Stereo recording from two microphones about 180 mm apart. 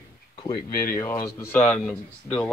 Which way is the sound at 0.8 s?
15° left (ahead or behind).